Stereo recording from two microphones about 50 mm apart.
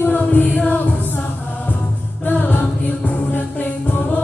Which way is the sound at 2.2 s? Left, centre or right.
Left.